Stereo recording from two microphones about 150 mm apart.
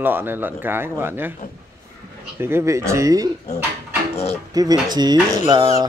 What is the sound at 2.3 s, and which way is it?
Speech, 15° right (ahead or behind).